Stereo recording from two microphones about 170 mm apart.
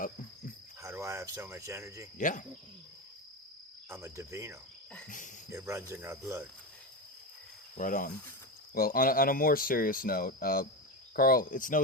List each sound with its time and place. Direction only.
0.8 s speech: 15° right (ahead or behind)
2.1 s cricket: 50° left (ahead or behind)
3.8 s cricket: 15° right (ahead or behind)
5.0 s cricket: 50° left (ahead or behind)
5.5 s cricket: 15° right (ahead or behind)
7.8 s cricket: 50° left (ahead or behind)
8.7 s speech: 60° left (ahead or behind)